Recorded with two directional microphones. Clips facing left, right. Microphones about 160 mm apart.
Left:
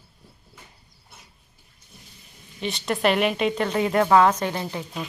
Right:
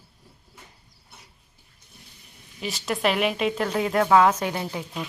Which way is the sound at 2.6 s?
Centre (ahead or behind).